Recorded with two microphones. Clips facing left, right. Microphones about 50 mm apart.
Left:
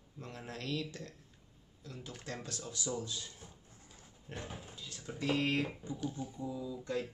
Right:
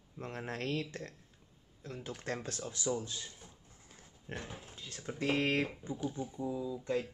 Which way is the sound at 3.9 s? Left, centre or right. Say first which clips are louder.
Right 5 dB; right.